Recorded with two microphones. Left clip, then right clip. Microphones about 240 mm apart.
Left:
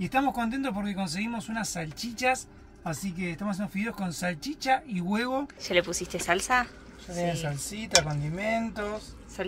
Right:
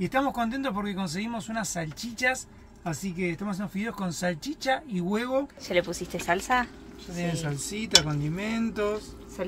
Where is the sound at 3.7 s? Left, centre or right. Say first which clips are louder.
Even; centre.